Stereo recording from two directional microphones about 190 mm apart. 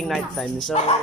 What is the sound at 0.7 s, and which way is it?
Speech, 35° left (ahead or behind).